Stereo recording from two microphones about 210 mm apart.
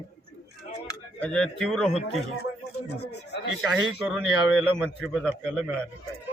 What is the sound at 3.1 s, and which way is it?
Speech, 55° left (ahead or behind).